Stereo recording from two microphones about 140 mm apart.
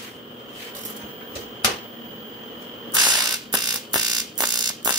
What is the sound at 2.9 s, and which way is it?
Fire alarm, 30° right (ahead or behind).